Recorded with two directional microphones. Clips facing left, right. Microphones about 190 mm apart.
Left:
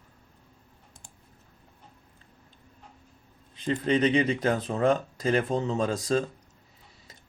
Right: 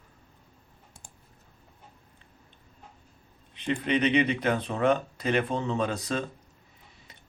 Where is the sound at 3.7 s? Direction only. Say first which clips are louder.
Left 2 dB; 45° left (ahead or behind).